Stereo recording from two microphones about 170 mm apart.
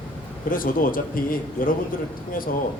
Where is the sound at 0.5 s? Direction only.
55° left (ahead or behind).